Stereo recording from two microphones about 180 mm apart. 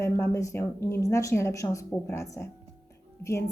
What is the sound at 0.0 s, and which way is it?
Speech, 15° left (ahead or behind).